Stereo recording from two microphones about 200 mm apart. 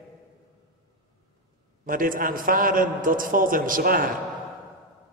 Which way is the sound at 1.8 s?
45° right (ahead or behind).